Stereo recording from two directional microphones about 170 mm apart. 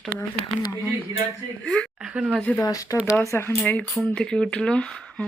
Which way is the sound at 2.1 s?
5° right (ahead or behind).